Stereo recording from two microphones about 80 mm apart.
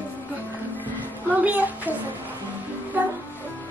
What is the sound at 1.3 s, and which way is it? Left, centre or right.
Music, centre.